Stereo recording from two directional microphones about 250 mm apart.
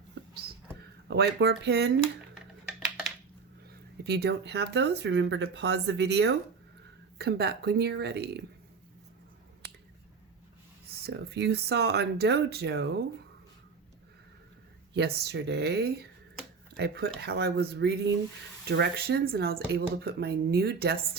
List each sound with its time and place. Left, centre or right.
1.0 s speech: right
4.0 s speech: right
11.0 s speech: right
14.9 s speech: right